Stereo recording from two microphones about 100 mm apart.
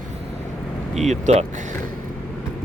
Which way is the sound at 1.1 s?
90° right.